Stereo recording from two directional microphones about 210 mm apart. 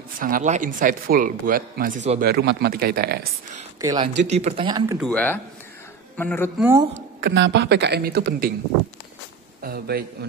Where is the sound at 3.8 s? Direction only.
15° right (ahead or behind).